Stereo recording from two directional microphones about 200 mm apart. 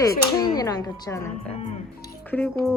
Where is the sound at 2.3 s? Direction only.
10° left (ahead or behind).